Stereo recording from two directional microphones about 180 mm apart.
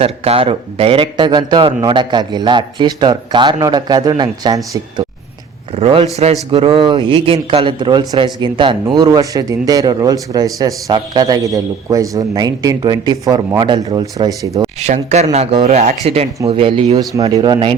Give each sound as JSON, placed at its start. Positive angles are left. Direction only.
{"t": 0.0, "sound": "speech", "side_deg": -30}
{"t": 5.7, "sound": "speech", "side_deg": -35}
{"t": 14.8, "sound": "speech", "side_deg": -40}